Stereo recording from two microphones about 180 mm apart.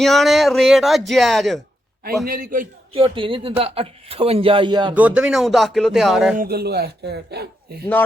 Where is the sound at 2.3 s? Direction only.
50° right (ahead or behind).